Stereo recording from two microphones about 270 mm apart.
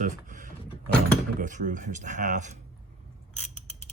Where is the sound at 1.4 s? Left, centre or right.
Right.